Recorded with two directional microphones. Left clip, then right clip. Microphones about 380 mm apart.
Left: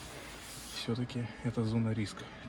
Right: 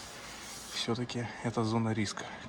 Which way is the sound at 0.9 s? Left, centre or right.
Centre.